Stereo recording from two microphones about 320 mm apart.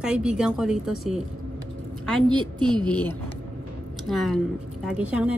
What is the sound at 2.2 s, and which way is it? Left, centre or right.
Speech, centre.